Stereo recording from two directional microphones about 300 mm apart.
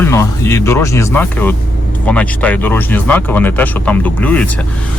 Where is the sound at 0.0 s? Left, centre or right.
Centre.